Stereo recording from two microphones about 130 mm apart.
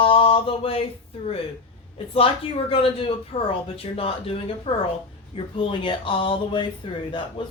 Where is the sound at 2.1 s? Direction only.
45° left (ahead or behind).